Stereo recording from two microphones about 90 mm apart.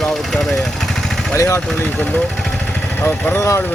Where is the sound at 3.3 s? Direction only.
30° left (ahead or behind).